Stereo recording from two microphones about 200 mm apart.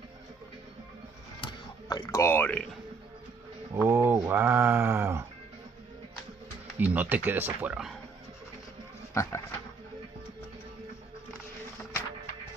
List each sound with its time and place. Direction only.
1.4 s a sound: 20° left (ahead or behind)
3.7 s speech: 10° right (ahead or behind)
6.8 s speech: 10° right (ahead or behind)
9.1 s speech: 15° left (ahead or behind)